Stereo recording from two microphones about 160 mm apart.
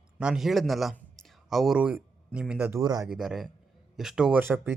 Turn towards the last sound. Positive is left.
turn(degrees=-15)  # may be behind; listen again after turning